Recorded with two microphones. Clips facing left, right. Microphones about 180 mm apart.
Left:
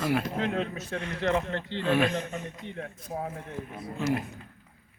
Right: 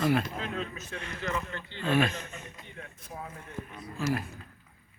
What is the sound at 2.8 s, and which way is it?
Speech, 50° left (ahead or behind).